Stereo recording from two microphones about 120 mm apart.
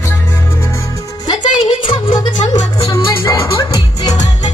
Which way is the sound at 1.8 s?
45° left (ahead or behind).